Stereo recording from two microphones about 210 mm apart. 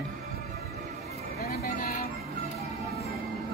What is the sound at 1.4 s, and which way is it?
Vehicle, 45° left (ahead or behind).